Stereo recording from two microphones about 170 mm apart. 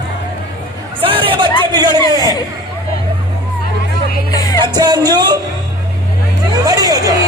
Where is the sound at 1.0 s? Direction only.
30° right (ahead or behind).